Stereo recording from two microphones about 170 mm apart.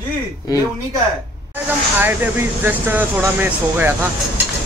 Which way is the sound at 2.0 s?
10° right (ahead or behind).